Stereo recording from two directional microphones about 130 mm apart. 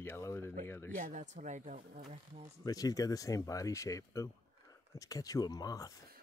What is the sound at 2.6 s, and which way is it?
Speech, 30° left (ahead or behind).